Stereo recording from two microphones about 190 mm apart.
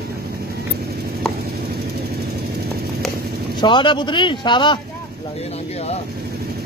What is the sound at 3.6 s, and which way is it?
Speech, 25° left (ahead or behind).